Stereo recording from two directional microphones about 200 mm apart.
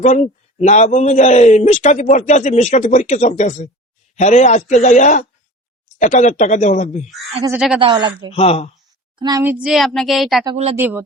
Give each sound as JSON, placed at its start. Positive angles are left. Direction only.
{"t": 0.0, "sound": "a man's voice", "side_deg": 35}
{"t": 7.8, "sound": "speech", "side_deg": -20}
{"t": 8.3, "sound": "a man's voice", "side_deg": 30}
{"t": 9.1, "sound": "speech", "side_deg": -20}
{"t": 9.4, "sound": "a woman's voice", "side_deg": -5}
{"t": 10.4, "sound": "speech", "side_deg": -30}
{"t": 10.8, "sound": "a man's voice", "side_deg": -10}